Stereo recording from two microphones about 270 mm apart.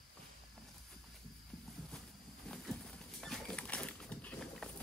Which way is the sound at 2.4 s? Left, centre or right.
Centre.